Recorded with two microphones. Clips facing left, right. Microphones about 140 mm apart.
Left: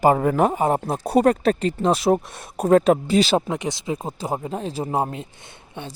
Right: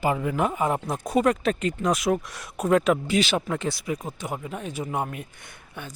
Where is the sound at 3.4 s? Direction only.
20° left (ahead or behind).